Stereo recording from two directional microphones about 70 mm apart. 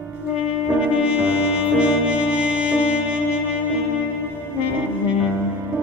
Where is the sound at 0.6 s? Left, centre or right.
Centre.